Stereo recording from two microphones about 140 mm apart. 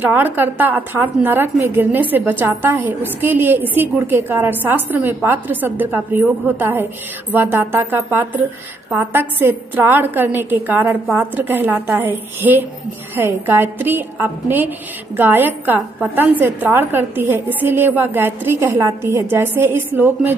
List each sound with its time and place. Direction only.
0.0 s a woman's voice: 15° right (ahead or behind)
9.4 s a woman's voice: 15° right (ahead or behind)